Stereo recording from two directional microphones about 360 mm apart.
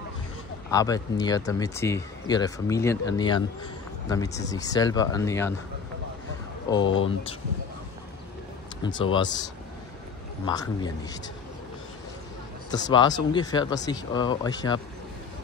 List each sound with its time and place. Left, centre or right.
0.7 s speech: centre
6.8 s speech: left
8.8 s speech: centre
12.7 s speech: centre